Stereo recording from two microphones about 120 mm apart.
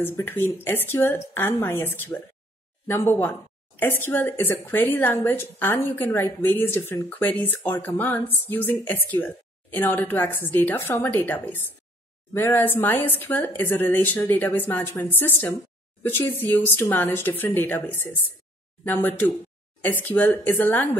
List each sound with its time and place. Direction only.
0.0 s a woman's voice: 20° left (ahead or behind)